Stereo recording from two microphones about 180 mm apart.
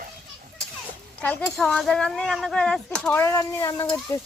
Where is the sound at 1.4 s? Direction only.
Centre (ahead or behind).